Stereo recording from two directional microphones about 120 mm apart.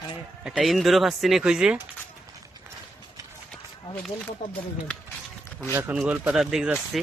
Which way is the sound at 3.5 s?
10° left (ahead or behind).